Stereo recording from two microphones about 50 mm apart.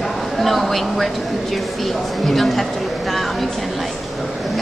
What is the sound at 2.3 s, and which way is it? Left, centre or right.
Speech, centre.